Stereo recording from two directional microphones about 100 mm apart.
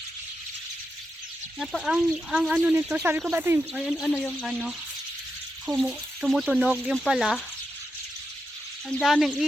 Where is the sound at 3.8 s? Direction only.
Centre (ahead or behind).